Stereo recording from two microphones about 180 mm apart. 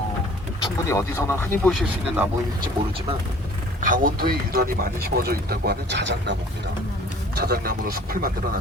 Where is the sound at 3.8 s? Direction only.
50° right (ahead or behind); by 6.4 s 75° right (ahead or behind).